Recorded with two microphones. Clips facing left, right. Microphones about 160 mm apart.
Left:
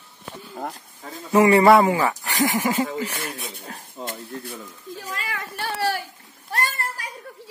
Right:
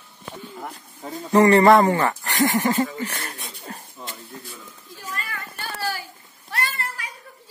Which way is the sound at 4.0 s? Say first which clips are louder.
Left 5 dB; 55° left (ahead or behind).